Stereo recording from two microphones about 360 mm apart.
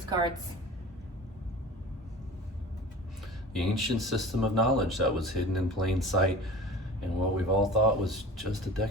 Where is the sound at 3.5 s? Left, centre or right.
Centre.